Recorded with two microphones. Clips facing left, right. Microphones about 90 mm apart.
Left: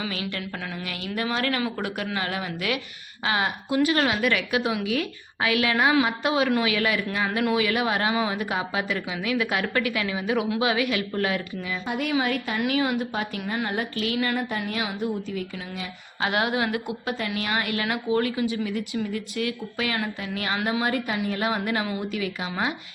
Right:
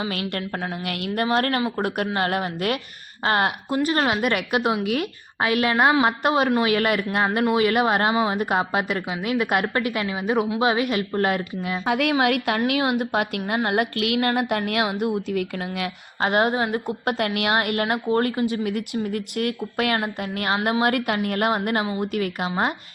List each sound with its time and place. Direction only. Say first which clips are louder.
0.1 s a woman's voice: right 4 dB; 55° right (ahead or behind)
0.8 s a woman's voice: right 4 dB; 60° right (ahead or behind)
3.8 s a woman's voice: right 3 dB; 40° right (ahead or behind)
11.9 s a woman's voice: right 7 dB; 90° right
12.2 s a woman's voice: right 6 dB; 70° right (ahead or behind)
12.5 s a woman's voice: right 2 dB; 60° right (ahead or behind)
16.2 s a woman's voice: right 4 dB; 40° right (ahead or behind)
17.1 s a woman's voice: right 6 dB; 60° right (ahead or behind); by 22.7 s 45° right (ahead or behind)